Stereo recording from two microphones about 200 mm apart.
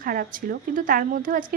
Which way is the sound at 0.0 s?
45° right (ahead or behind).